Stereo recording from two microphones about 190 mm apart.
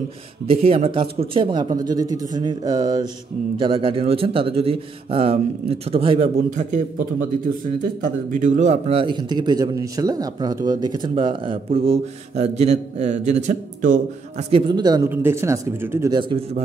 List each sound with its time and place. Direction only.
0.5 s a man's voice: 30° right (ahead or behind)
7.8 s a man's voice: 40° right (ahead or behind)
14.5 s a man's voice: 20° right (ahead or behind)